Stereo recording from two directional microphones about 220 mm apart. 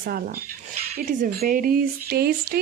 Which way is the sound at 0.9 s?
40° right (ahead or behind).